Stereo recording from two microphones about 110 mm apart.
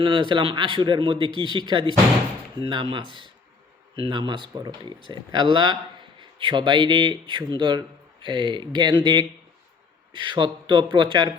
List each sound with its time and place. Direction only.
0.0 s a man's voice: 50° right (ahead or behind)